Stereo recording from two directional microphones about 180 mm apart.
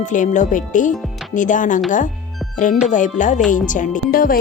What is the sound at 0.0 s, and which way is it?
Speech, 45° left (ahead or behind).